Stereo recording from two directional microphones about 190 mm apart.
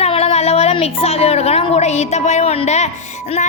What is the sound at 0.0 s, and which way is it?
A woman's voice, 30° left (ahead or behind).